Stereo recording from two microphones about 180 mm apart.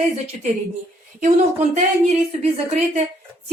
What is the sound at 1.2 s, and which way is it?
A woman's voice, 40° right (ahead or behind).